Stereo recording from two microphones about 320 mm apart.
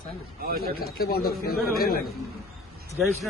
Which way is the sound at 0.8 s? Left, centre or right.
Left.